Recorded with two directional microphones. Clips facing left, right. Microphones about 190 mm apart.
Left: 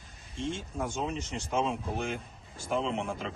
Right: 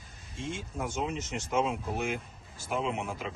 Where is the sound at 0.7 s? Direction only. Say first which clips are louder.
Right 2 dB; 5° right (ahead or behind).